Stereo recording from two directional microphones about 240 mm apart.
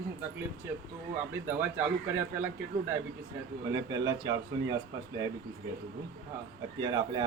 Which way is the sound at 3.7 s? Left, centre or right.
Centre.